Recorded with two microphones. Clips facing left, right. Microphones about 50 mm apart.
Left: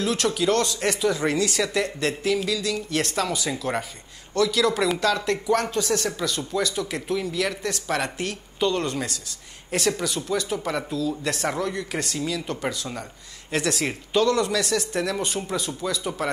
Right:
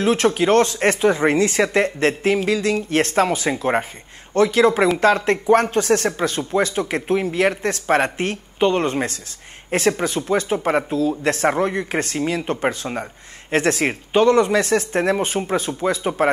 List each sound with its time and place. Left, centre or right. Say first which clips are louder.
0.0 s speech: right 6 dB; right